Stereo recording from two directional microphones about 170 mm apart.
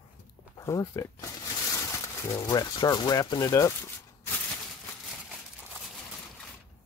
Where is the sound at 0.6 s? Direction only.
15° left (ahead or behind).